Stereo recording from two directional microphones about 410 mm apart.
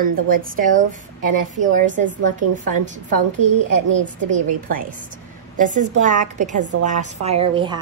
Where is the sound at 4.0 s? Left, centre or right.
Right.